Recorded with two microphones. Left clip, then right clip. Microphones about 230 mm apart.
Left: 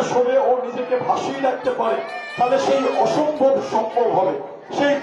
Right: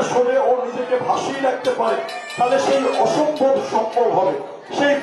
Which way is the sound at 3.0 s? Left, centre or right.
Left.